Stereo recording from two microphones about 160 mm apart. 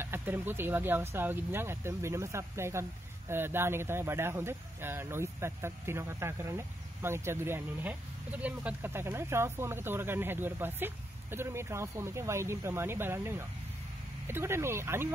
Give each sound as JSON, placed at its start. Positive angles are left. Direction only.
{"t": 0.0, "sound": "speech", "side_deg": -15}